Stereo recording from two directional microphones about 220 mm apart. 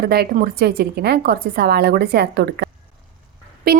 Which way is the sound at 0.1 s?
45° right (ahead or behind).